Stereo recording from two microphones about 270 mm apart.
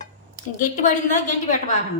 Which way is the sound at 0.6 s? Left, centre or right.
Left.